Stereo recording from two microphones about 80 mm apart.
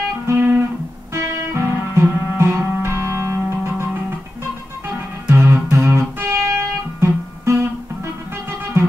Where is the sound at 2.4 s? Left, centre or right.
Right.